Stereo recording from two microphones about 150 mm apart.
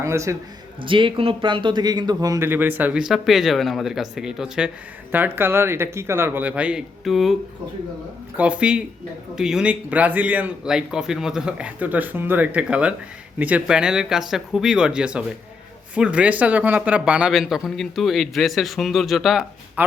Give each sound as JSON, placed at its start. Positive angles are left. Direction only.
{"t": 0.0, "sound": "a man's voice", "side_deg": -20}
{"t": 0.8, "sound": "a man's voice", "side_deg": -35}
{"t": 8.4, "sound": "a man's voice", "side_deg": -10}